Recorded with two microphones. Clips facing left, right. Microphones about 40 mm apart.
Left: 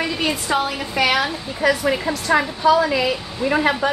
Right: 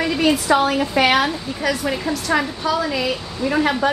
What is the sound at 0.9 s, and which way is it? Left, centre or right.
Speech, centre.